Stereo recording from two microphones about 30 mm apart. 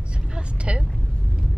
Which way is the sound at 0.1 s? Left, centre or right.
Right.